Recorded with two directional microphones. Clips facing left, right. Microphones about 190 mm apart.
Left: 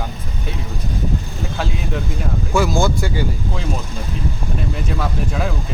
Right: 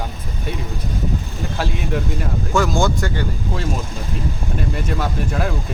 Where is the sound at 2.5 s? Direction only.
10° left (ahead or behind).